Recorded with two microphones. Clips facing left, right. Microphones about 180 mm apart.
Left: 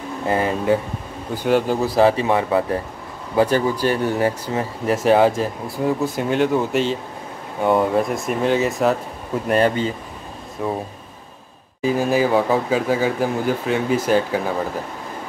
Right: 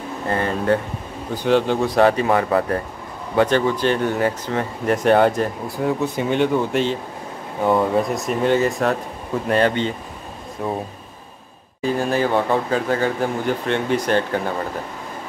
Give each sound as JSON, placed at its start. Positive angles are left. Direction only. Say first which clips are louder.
{"t": 0.3, "sound": "speech", "louder": "left 1 dB", "side_deg": 10}
{"t": 2.1, "sound": "speech", "louder": "even", "side_deg": 25}
{"t": 3.4, "sound": "speech", "louder": "even", "side_deg": 10}
{"t": 11.8, "sound": "speech", "louder": "left 2 dB", "side_deg": 5}